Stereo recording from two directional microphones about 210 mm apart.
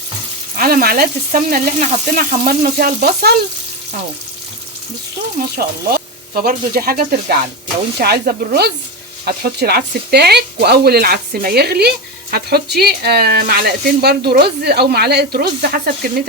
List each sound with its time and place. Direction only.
0.5 s speech: 45° right (ahead or behind)
5.4 s speech: 45° right (ahead or behind)